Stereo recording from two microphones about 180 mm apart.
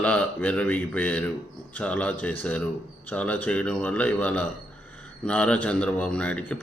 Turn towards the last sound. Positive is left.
turn(degrees=5)  # may be behind; listen again after turning